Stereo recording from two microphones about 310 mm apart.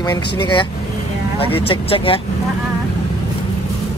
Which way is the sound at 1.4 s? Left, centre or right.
Centre.